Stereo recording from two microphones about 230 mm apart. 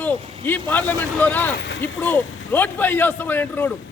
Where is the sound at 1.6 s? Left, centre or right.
Left.